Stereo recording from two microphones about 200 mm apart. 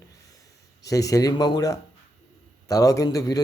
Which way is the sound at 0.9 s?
15° left (ahead or behind).